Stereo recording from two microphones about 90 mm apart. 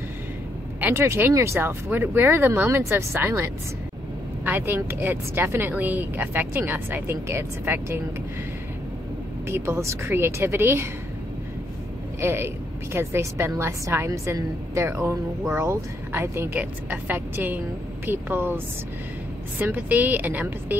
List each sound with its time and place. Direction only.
0.7 s a woman's voice: 20° right (ahead or behind)
4.5 s a woman's voice: 25° right (ahead or behind)
9.5 s a woman's voice: 30° right (ahead or behind)
12.2 s a woman's voice: 30° right (ahead or behind)
19.6 s a woman's voice: 20° right (ahead or behind)